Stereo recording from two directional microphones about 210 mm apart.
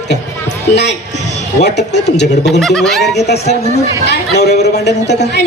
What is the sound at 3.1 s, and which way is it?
Speech, 55° left (ahead or behind).